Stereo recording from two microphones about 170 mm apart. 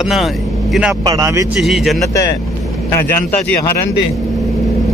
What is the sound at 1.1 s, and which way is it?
Speech, 20° right (ahead or behind).